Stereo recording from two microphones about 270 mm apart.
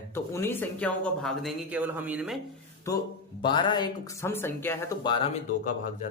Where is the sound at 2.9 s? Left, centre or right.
Centre.